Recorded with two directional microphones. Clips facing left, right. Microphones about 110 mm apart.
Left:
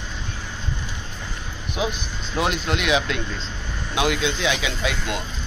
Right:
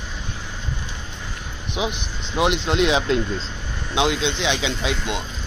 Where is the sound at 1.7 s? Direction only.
20° right (ahead or behind).